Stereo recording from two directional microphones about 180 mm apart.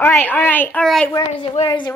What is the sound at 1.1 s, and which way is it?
Speech, 25° left (ahead or behind).